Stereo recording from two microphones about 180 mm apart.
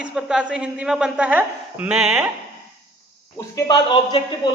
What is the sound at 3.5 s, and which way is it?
A man's voice, 25° left (ahead or behind).